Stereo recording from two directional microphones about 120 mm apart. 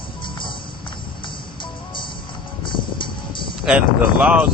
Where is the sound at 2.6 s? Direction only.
40° left (ahead or behind).